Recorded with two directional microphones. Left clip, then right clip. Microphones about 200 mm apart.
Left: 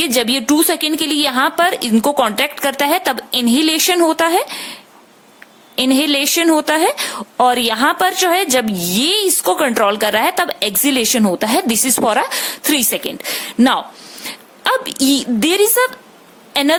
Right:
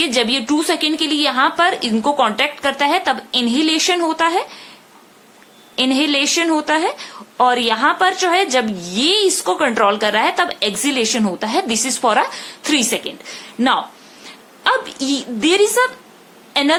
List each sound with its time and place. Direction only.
0.0 s speech: 45° left (ahead or behind)
5.7 s a woman's voice: 50° left (ahead or behind)